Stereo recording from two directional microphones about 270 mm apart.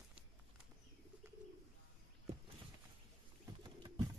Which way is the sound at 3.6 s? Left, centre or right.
Centre.